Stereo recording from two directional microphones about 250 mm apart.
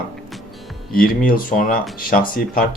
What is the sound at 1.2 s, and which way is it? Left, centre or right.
Speech, left.